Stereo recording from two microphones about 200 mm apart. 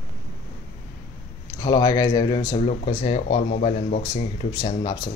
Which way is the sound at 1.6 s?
20° left (ahead or behind).